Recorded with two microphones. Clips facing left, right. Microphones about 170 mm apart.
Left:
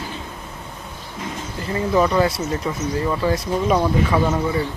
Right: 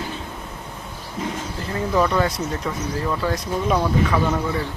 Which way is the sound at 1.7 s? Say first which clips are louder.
Left 2 dB; 10° left (ahead or behind).